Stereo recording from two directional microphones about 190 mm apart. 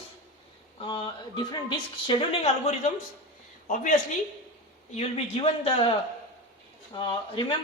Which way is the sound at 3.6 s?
45° left (ahead or behind).